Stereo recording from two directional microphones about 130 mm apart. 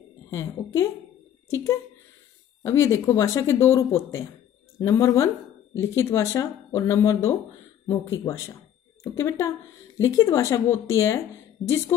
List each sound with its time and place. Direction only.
0.3 s speech: 20° left (ahead or behind)